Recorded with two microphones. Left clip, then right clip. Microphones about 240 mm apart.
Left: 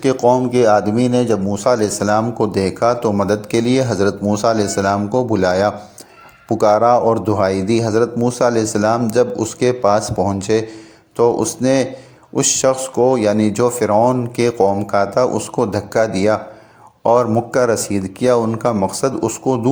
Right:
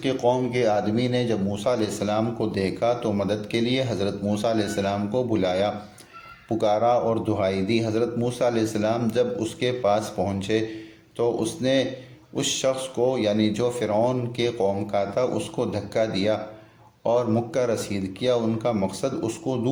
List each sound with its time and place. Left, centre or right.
0.0 s speech: left